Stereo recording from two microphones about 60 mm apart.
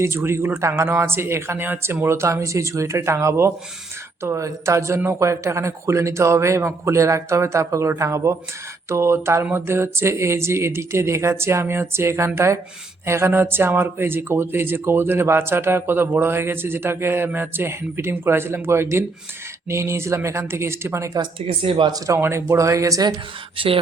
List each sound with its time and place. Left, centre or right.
0.0 s a man's voice: right
21.9 s speech: right
22.2 s a man's voice: right